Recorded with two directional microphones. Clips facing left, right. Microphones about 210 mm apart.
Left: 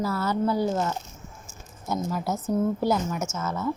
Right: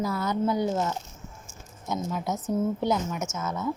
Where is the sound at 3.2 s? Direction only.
15° right (ahead or behind).